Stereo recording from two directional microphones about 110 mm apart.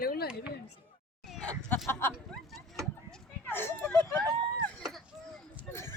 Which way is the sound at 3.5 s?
20° left (ahead or behind).